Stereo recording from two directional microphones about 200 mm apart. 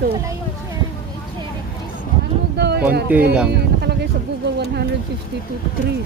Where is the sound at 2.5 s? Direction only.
55° right (ahead or behind).